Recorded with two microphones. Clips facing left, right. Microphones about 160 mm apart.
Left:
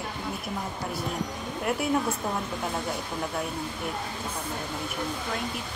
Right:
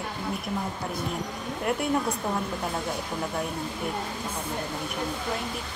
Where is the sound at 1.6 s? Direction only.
Centre (ahead or behind).